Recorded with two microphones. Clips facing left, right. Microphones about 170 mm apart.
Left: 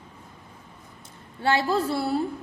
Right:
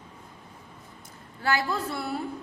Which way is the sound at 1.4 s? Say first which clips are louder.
Left 5 dB; 25° left (ahead or behind).